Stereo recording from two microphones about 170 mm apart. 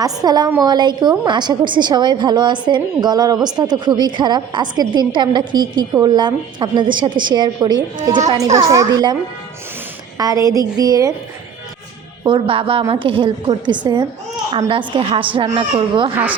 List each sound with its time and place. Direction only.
0.0 s a woman's voice: 25° right (ahead or behind)
10.2 s a woman's voice: 20° right (ahead or behind)
12.2 s a woman's voice: 30° right (ahead or behind)
15.4 s a woman's voice: 40° right (ahead or behind)